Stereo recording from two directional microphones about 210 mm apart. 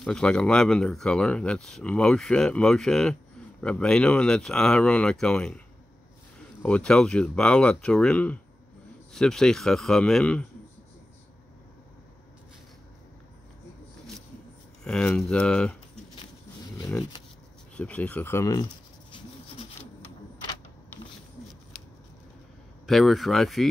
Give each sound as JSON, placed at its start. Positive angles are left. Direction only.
{"t": 0.0, "sound": "speech", "side_deg": 5}
{"t": 6.6, "sound": "speech", "side_deg": 5}
{"t": 14.9, "sound": "speech", "side_deg": 5}
{"t": 17.7, "sound": "speech", "side_deg": 5}
{"t": 19.1, "sound": "rub", "side_deg": 25}
{"t": 22.8, "sound": "speech", "side_deg": 0}